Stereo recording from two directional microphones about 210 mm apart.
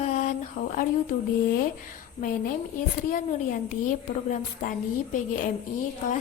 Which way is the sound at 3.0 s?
40° left (ahead or behind).